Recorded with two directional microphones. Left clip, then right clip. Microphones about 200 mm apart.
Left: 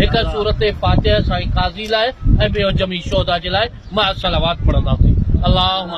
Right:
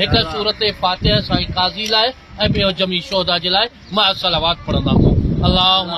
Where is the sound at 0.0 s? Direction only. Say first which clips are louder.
Right 1 dB; 5° left (ahead or behind).